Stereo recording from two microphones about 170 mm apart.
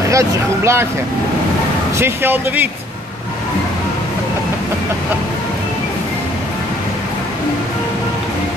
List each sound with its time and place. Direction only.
0.1 s speech: 15° right (ahead or behind)
2.0 s speech: 15° right (ahead or behind)